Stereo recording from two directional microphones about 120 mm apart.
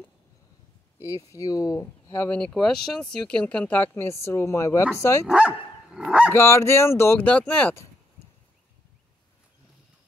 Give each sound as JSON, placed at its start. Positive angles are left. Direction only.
{"t": 1.0, "sound": "speech", "side_deg": 25}
{"t": 5.2, "sound": "speech", "side_deg": -10}
{"t": 6.3, "sound": "speech", "side_deg": 20}